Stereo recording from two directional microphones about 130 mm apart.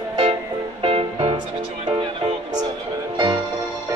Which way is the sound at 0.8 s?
45° right (ahead or behind).